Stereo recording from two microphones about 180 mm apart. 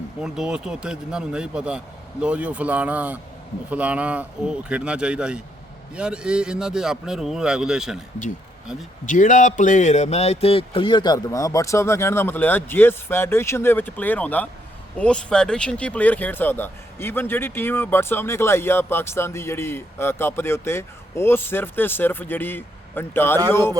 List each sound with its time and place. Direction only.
0.2 s a man's voice: 5° right (ahead or behind)
9.0 s speech: 45° left (ahead or behind); by 23.7 s 15° left (ahead or behind)